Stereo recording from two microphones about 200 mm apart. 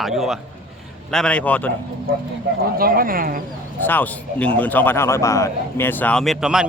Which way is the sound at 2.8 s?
45° right (ahead or behind).